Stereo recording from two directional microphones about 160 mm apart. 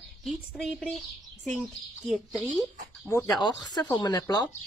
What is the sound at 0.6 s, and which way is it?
A woman's voice, 5° left (ahead or behind).